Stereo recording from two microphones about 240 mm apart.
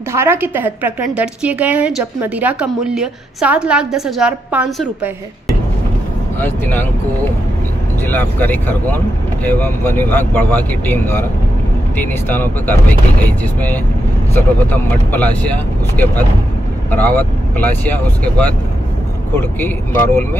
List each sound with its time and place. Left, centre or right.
0.1 s a woman's voice: centre
8.0 s speech: centre